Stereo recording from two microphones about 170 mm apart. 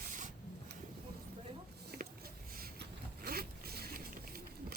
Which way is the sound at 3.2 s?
65° right (ahead or behind).